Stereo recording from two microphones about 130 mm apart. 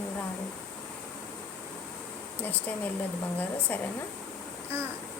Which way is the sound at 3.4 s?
15° left (ahead or behind).